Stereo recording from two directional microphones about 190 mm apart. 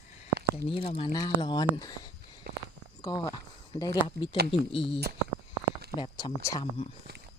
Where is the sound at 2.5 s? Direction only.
55° right (ahead or behind).